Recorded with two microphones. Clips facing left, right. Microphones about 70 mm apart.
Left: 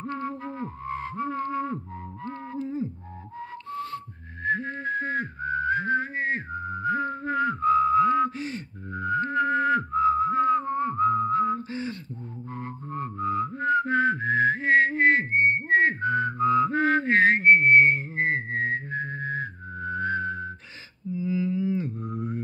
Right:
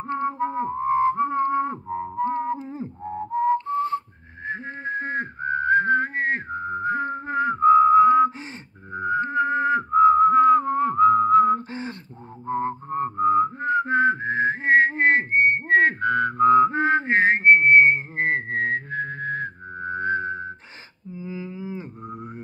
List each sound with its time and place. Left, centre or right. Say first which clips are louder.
0.0 s music: right 7 dB; right
3.3 s whistling: right 13 dB; right
11.7 s a sound: even; right
12.4 s whistling: right 12 dB; right
16.4 s music: right 7 dB; right
16.7 s whistling: right 1 dB; right
18.1 s whistling: right 2 dB; right
19.8 s music: right 2 dB; right
21.2 s a sound: left 7 dB; right